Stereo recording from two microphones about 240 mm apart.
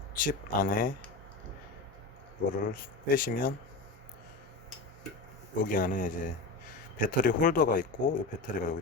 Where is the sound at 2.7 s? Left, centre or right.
Left.